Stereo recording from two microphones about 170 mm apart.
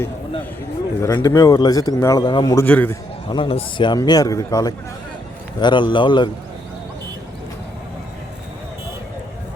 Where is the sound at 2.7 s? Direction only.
10° left (ahead or behind).